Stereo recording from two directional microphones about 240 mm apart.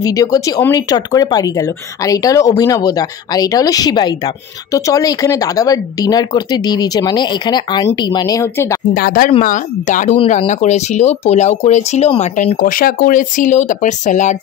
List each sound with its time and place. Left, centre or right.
0.0 s speech: centre
8.9 s speech: left